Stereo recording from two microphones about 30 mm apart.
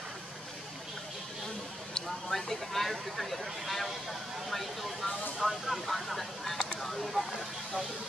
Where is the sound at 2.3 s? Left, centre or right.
Centre.